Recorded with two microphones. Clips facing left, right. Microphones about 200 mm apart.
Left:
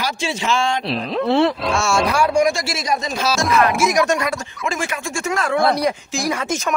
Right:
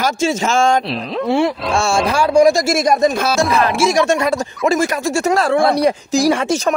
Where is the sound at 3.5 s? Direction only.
30° right (ahead or behind).